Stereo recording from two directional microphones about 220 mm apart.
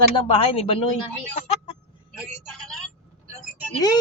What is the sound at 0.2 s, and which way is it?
Speech, 25° left (ahead or behind).